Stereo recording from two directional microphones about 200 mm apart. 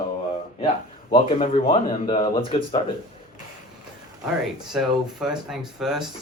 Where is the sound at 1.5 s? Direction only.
25° left (ahead or behind).